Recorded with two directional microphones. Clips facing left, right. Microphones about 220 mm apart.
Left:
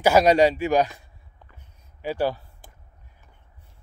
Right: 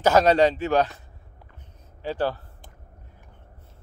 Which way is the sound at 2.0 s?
10° left (ahead or behind).